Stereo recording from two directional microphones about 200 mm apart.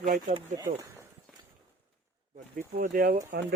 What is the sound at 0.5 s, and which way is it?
Speech, 15° right (ahead or behind).